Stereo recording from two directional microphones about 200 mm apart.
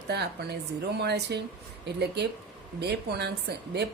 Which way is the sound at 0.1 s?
55° right (ahead or behind).